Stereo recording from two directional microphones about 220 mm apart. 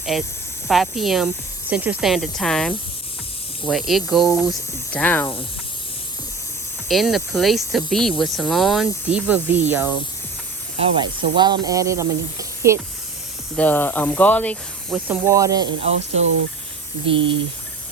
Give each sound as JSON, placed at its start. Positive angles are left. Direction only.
{"t": 0.0, "sound": "speech", "side_deg": 0}
{"t": 6.8, "sound": "speech", "side_deg": 0}
{"t": 10.8, "sound": "speech", "side_deg": -20}
{"t": 13.6, "sound": "speech", "side_deg": 10}
{"t": 15.9, "sound": "speech", "side_deg": -60}
{"t": 17.1, "sound": "speech", "side_deg": -25}